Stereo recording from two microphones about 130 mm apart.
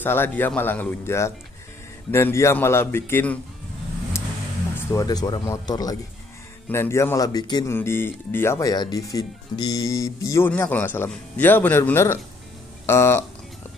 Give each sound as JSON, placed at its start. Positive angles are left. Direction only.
{"t": 0.0, "sound": "speech", "side_deg": 15}
{"t": 5.0, "sound": "speech", "side_deg": 35}
{"t": 7.7, "sound": "speech", "side_deg": 20}